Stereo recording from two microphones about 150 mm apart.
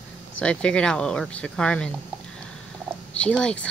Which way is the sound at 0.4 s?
5° left (ahead or behind).